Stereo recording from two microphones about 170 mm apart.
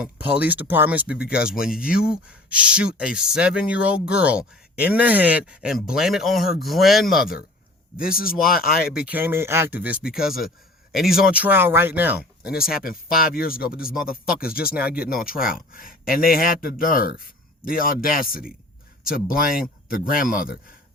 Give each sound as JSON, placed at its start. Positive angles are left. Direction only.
{"t": 0.0, "sound": "speech", "side_deg": -10}
{"t": 8.1, "sound": "speech", "side_deg": 60}
{"t": 8.9, "sound": "speech", "side_deg": -5}
{"t": 12.7, "sound": "speech", "side_deg": 60}